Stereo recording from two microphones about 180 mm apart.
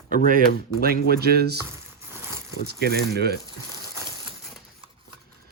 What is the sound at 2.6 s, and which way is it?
Speech, 65° right (ahead or behind).